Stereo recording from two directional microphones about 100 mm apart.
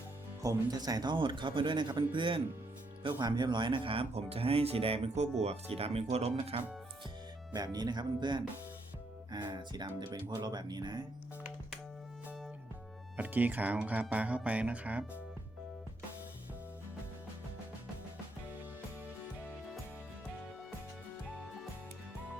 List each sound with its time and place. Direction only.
0.4 s speech: 40° right (ahead or behind); by 6.7 s 85° right
7.5 s speech: 40° right (ahead or behind)
13.1 s speech: 15° right (ahead or behind)